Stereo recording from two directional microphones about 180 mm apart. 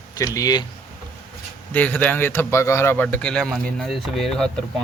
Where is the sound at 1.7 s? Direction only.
10° left (ahead or behind).